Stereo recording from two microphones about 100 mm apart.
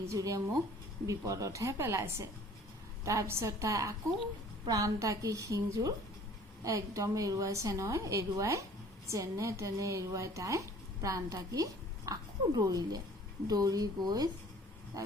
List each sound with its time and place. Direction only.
0.1 s a woman's voice: 35° right (ahead or behind)
14.9 s wild animals: 35° right (ahead or behind)